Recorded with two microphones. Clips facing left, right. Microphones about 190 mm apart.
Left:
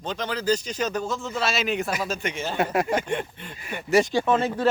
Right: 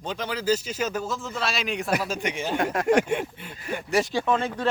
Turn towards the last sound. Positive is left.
turn(degrees=5)  # may be behind; listen again after turning